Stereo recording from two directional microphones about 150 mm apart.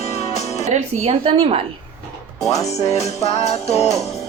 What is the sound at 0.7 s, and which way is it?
Speech, 40° right (ahead or behind).